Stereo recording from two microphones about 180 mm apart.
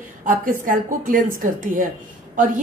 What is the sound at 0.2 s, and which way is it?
A woman's voice, 45° right (ahead or behind).